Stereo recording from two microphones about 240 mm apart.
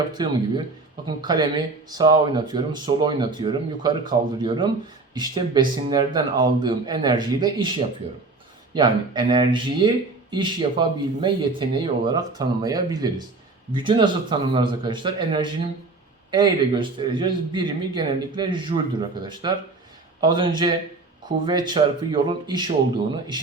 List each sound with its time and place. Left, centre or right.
0.2 s speech: centre